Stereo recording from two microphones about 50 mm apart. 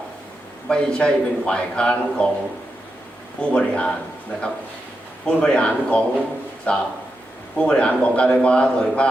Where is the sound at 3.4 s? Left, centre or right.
Left.